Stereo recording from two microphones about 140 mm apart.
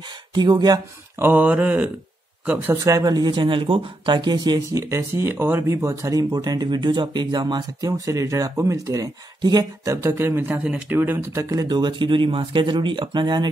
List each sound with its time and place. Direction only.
0.3 s speech: 30° right (ahead or behind)
1.1 s mantra: 15° right (ahead or behind)
2.4 s speech: 10° right (ahead or behind)
2.7 s speech: 25° right (ahead or behind)
9.9 s speech: 15° right (ahead or behind); by 13.5 s 35° right (ahead or behind)